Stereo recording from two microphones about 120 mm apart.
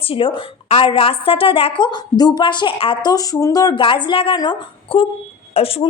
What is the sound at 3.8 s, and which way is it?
A woman's voice, 45° left (ahead or behind).